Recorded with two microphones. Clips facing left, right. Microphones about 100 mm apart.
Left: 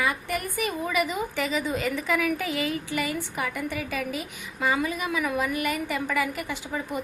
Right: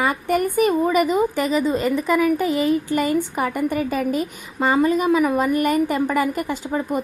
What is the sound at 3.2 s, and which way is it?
A woman's voice, 45° right (ahead or behind).